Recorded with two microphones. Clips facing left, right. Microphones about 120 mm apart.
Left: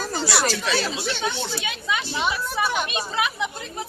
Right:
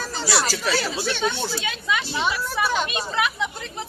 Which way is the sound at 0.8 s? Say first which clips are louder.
Right 1 dB; 20° left (ahead or behind).